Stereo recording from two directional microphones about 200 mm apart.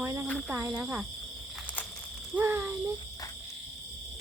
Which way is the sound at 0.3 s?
5° left (ahead or behind).